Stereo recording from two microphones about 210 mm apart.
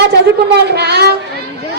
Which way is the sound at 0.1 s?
50° right (ahead or behind).